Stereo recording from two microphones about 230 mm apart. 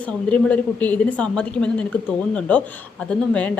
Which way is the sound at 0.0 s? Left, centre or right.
Centre.